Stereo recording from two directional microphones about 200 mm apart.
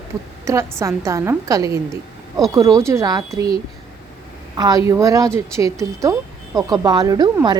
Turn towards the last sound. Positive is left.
turn(degrees=-20)  # may be behind; listen again after turning